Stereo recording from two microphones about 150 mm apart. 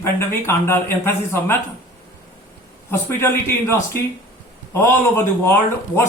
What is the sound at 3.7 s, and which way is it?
Speech, 15° left (ahead or behind).